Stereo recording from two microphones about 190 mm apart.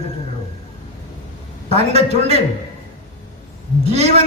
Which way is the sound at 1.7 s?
35° right (ahead or behind).